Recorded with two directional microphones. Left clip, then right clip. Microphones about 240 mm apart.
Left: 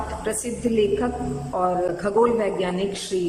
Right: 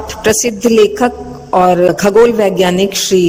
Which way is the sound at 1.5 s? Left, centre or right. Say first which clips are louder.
Right 14 dB; right.